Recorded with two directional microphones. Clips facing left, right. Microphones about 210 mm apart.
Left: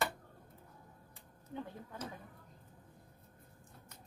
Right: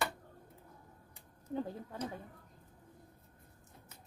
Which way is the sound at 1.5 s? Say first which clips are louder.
Right 6 dB; 35° right (ahead or behind).